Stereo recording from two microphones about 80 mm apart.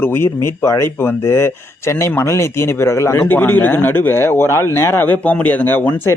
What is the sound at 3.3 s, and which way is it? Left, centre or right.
Speech, left.